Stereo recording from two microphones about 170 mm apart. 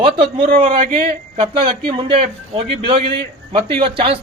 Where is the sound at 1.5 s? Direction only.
30° right (ahead or behind).